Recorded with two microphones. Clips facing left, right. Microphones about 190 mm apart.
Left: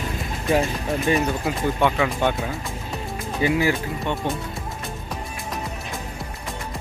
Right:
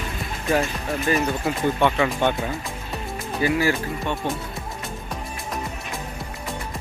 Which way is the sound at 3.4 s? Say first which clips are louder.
Left 1 dB; 15° left (ahead or behind).